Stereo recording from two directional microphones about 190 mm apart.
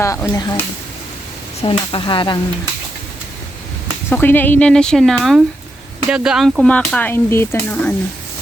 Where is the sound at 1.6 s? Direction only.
30° left (ahead or behind).